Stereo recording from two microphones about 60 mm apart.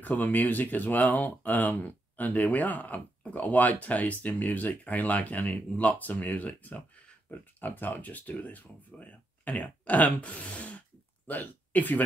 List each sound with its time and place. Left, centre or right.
0.0 s speech: left